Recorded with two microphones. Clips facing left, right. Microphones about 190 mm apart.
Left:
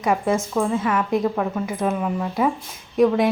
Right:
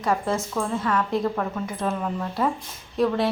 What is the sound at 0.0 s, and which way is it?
Speech, 15° left (ahead or behind).